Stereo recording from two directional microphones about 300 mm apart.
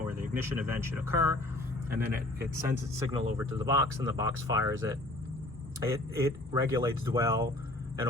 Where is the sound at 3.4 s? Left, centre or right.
Centre.